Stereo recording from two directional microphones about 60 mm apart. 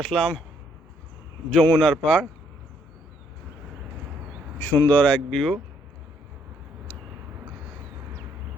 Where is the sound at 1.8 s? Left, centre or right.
Centre.